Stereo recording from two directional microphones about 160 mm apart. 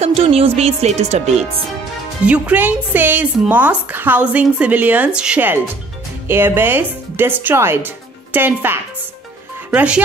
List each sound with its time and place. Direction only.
0.0 s speech: 40° right (ahead or behind)
2.2 s speech: 10° right (ahead or behind)